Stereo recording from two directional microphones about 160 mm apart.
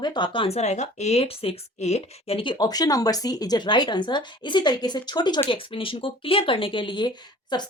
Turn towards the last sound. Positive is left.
turn(degrees=25)  # may be behind; listen again after turning